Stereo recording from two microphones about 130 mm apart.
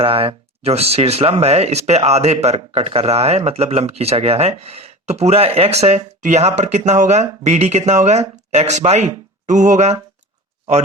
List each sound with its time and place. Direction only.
0.0 s speech: 45° right (ahead or behind); by 10.0 s 60° right (ahead or behind)